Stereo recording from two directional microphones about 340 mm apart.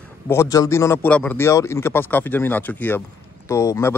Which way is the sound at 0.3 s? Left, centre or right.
Centre.